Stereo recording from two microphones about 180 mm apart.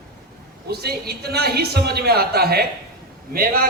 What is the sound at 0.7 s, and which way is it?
A man's voice, 60° right (ahead or behind).